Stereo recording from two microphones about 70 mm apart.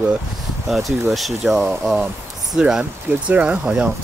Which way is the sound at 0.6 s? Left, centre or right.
Centre.